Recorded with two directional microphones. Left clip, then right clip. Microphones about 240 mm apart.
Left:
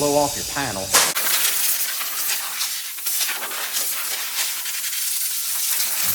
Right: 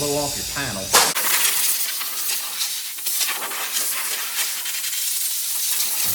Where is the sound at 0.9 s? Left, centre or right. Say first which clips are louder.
Right 2 dB; centre.